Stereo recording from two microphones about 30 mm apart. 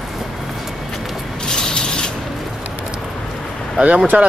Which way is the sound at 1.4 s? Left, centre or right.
Left.